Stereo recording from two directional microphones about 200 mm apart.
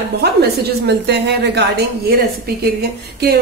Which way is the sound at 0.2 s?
55° right (ahead or behind).